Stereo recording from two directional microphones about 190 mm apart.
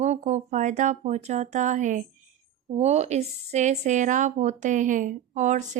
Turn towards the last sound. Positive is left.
turn(degrees=-40)  # may be behind; listen again after turning